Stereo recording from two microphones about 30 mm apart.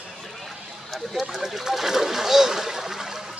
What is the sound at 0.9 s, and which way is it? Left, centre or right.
Speech, centre.